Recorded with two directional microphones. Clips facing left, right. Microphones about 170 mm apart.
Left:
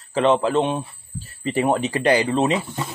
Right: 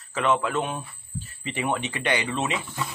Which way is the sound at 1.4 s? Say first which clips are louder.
Left 8 dB; 40° left (ahead or behind).